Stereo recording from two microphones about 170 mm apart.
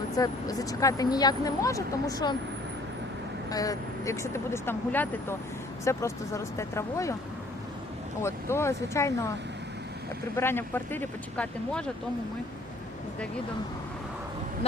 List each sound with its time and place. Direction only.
0.2 s speech: 20° left (ahead or behind)
3.5 s speech: 20° left (ahead or behind)
8.2 s speech: 15° left (ahead or behind)
10.3 s speech: 15° left (ahead or behind)